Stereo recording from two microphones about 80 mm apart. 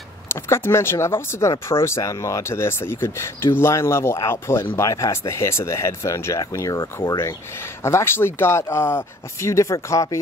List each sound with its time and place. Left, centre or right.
0.3 s speech: left